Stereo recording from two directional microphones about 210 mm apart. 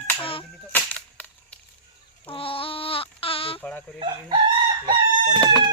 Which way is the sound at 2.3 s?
25° left (ahead or behind).